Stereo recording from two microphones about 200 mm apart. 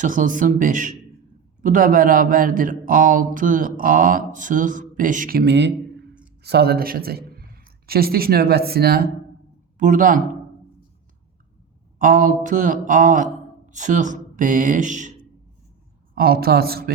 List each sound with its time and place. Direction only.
0.0 s a man's voice: 40° right (ahead or behind)
9.7 s speech: 40° right (ahead or behind)
11.9 s speech: 40° right (ahead or behind)
16.1 s speech: 50° right (ahead or behind)